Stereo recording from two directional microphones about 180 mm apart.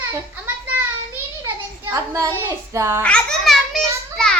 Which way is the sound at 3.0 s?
5° left (ahead or behind).